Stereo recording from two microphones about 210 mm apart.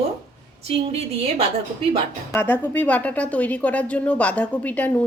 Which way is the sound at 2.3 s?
10° left (ahead or behind).